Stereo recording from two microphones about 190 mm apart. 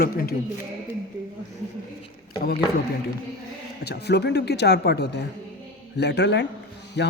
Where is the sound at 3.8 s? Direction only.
60° left (ahead or behind).